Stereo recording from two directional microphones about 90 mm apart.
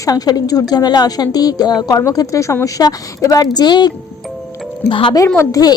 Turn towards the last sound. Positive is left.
turn(degrees=45)  # may be behind; listen again after turning